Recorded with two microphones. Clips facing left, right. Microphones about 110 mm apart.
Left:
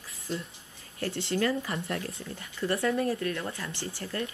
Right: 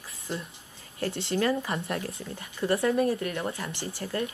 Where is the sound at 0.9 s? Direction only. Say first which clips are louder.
Right 1 dB; 25° right (ahead or behind).